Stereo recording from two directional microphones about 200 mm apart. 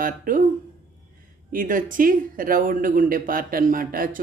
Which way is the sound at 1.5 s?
45° right (ahead or behind).